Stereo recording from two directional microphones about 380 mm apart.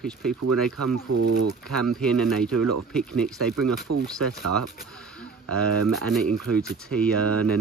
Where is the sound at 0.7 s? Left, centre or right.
Right.